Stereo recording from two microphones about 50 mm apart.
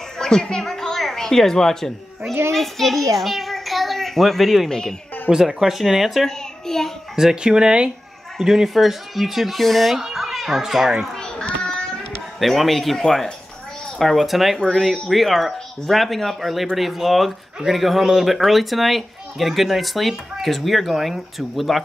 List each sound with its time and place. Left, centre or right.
0.2 s a woman's voice: centre
5.3 s speech: centre
5.6 s a child's voice: centre
6.2 s a child's voice: centre
7.2 s speech: centre
8.4 s a child's voice: centre
11.1 s children playing: centre
12.4 s a child's voice: centre